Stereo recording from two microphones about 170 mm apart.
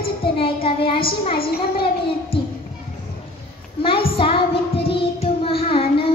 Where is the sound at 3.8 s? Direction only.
30° left (ahead or behind).